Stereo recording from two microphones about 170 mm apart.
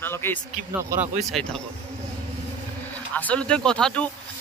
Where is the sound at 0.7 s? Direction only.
15° right (ahead or behind).